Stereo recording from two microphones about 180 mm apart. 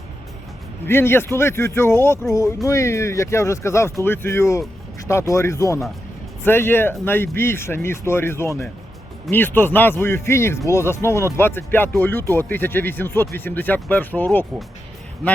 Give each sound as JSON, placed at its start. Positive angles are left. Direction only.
{"t": 0.9, "sound": "speech", "side_deg": 15}